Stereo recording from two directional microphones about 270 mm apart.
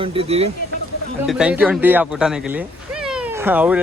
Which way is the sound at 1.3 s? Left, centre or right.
Centre.